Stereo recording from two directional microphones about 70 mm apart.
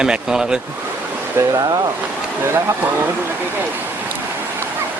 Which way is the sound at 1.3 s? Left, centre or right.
Right.